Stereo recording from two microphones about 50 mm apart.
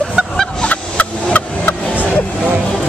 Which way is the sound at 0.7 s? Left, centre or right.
Left.